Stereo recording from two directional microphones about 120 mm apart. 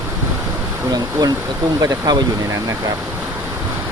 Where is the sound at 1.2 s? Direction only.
35° right (ahead or behind).